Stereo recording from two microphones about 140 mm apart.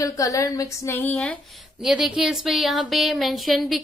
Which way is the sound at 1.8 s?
5° right (ahead or behind).